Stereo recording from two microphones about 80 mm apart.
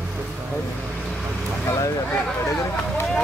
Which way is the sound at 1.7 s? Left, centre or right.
Left.